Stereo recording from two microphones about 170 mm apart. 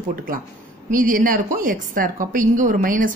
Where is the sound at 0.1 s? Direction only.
55° right (ahead or behind).